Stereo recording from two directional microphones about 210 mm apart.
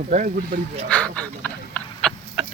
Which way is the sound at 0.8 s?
5° left (ahead or behind).